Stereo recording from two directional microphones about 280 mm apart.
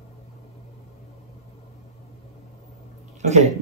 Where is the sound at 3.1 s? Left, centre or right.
Right.